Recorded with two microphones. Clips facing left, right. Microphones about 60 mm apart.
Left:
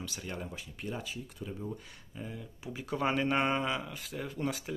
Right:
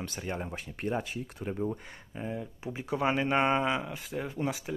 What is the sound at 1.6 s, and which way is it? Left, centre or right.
Speech, right.